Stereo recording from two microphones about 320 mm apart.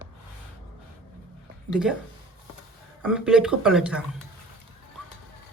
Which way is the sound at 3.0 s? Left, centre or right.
Centre.